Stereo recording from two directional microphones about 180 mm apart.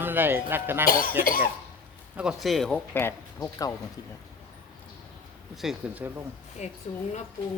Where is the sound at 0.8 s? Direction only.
55° left (ahead or behind).